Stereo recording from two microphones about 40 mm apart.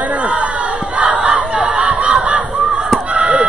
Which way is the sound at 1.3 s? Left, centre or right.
Right.